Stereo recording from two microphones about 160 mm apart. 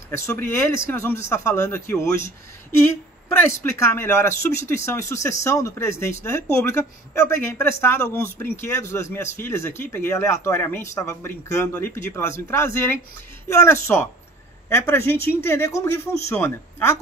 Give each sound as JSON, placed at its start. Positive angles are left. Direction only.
{"t": 0.1, "sound": "speech", "side_deg": 15}